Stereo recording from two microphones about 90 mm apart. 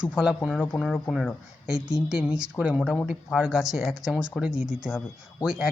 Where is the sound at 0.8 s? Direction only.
5° left (ahead or behind).